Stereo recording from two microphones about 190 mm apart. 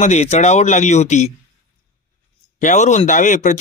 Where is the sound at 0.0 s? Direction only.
35° left (ahead or behind).